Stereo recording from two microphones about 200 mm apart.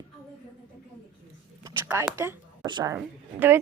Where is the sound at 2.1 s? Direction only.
15° right (ahead or behind).